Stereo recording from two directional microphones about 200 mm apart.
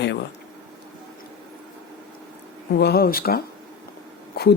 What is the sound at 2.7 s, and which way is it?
Speech, 55° left (ahead or behind).